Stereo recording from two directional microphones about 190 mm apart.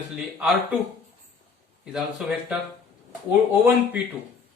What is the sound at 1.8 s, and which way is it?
Speech, 5° right (ahead or behind).